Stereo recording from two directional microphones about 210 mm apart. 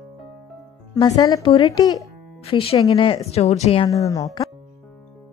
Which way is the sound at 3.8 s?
15° left (ahead or behind).